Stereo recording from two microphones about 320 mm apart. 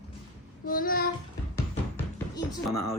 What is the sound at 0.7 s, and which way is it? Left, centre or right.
Child singing, left.